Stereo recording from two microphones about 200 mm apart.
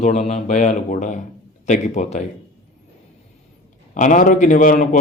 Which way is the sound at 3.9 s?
40° left (ahead or behind).